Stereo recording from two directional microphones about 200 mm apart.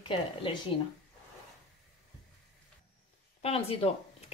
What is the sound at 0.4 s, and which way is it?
Speech, 25° left (ahead or behind).